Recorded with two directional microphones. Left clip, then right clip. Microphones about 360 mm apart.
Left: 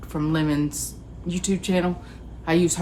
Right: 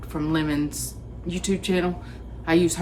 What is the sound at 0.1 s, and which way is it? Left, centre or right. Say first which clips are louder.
Speech: left 1 dB; centre.